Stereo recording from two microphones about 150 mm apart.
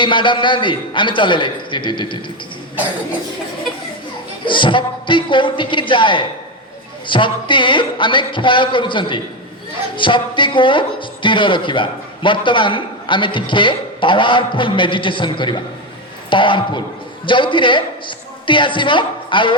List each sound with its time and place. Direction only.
0.0 s speech: 35° left (ahead or behind)
4.4 s speech: 35° left (ahead or behind)